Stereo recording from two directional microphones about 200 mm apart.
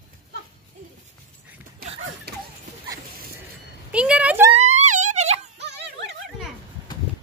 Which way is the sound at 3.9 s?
5° right (ahead or behind).